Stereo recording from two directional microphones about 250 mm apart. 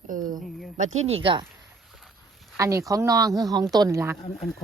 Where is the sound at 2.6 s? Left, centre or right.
Centre.